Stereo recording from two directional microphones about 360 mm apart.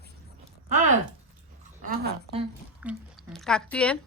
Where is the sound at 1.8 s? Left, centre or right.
Right.